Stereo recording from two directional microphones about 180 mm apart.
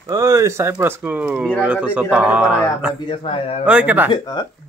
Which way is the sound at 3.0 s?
30° left (ahead or behind).